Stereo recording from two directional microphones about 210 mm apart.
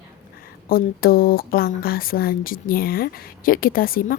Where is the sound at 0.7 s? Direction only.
45° left (ahead or behind).